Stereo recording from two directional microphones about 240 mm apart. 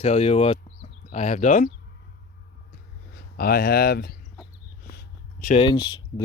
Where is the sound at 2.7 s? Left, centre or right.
Left.